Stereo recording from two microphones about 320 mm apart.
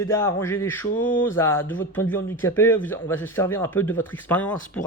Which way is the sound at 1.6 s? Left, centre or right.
Left.